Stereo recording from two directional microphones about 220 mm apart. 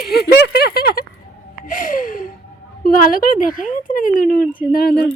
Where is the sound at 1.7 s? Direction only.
35° left (ahead or behind).